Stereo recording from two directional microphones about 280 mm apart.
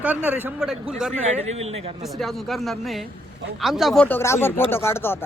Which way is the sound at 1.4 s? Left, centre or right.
Right.